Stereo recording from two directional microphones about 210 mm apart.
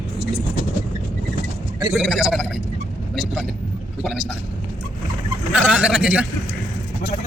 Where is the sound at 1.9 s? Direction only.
Centre (ahead or behind).